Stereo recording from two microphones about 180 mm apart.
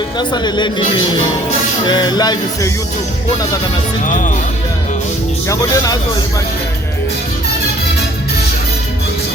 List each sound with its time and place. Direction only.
0.2 s speech: 25° left (ahead or behind)
4.0 s speech: 45° left (ahead or behind)
5.5 s speech: 20° left (ahead or behind)